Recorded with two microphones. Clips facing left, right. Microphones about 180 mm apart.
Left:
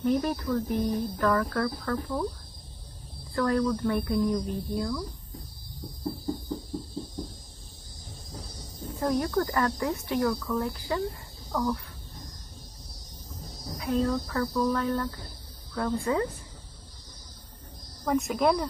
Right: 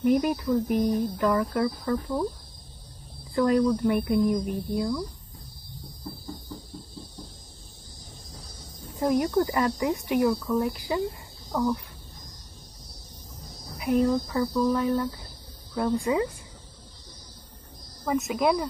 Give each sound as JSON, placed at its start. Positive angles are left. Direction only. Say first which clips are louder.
{"t": 0.0, "sound": "speech", "louder": "right 3 dB", "side_deg": -15}
{"t": 3.3, "sound": "speech", "louder": "right 4 dB", "side_deg": -20}
{"t": 9.0, "sound": "speech", "louder": "right 3 dB", "side_deg": -15}
{"t": 13.7, "sound": "speech", "louder": "right 4 dB", "side_deg": -15}
{"t": 18.0, "sound": "speech", "louder": "even", "side_deg": -5}